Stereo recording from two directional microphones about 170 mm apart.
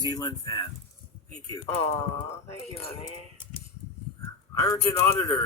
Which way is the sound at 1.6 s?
35° left (ahead or behind).